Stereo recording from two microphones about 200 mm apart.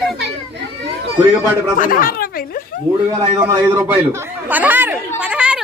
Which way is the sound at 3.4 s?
10° right (ahead or behind).